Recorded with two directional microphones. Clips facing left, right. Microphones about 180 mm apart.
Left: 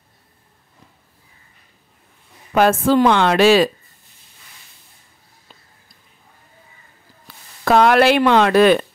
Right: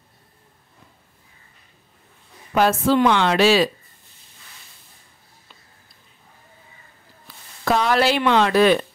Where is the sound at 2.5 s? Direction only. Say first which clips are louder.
Left 3 dB; 50° left (ahead or behind).